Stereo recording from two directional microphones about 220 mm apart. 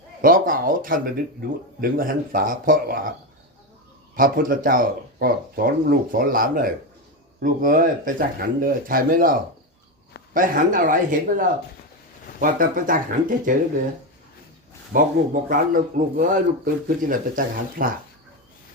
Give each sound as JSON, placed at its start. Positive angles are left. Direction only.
{"t": 0.2, "sound": "speech", "side_deg": -40}
{"t": 4.1, "sound": "speech", "side_deg": -40}
{"t": 14.9, "sound": "speech", "side_deg": -40}